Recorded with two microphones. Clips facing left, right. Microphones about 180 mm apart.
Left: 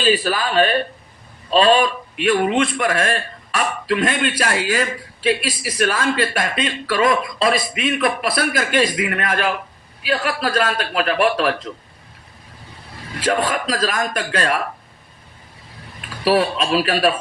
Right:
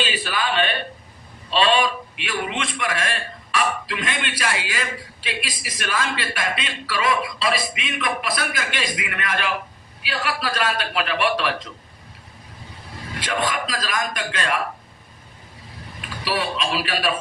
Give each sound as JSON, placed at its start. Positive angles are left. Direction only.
{"t": 0.0, "sound": "a man's voice", "side_deg": 40}
{"t": 13.1, "sound": "a man's voice", "side_deg": 40}
{"t": 16.0, "sound": "speech", "side_deg": 40}